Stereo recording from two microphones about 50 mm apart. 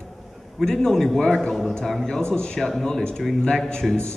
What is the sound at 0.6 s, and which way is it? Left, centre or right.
A man's voice, centre.